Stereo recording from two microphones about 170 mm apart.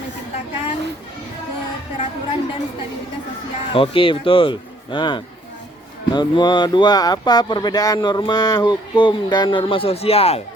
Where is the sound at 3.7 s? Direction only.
30° left (ahead or behind).